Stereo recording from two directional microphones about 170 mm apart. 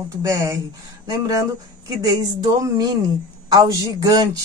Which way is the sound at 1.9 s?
25° right (ahead or behind).